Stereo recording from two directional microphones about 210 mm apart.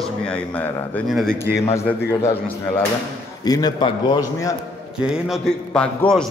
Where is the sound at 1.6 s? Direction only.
15° left (ahead or behind).